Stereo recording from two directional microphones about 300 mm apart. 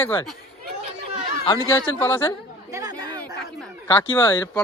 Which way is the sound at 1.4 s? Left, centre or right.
Centre.